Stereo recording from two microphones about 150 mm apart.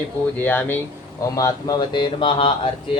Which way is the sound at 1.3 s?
25° left (ahead or behind).